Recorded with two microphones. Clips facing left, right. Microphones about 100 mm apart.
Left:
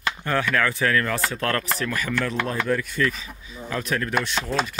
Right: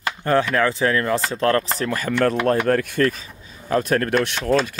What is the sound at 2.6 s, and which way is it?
Speech, 60° right (ahead or behind).